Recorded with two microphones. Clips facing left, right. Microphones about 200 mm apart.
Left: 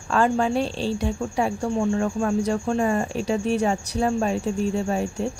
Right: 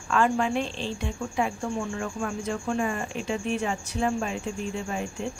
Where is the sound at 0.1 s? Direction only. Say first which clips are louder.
Left 3 dB; 35° left (ahead or behind).